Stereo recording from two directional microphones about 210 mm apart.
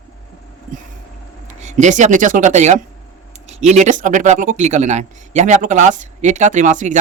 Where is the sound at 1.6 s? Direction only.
35° right (ahead or behind).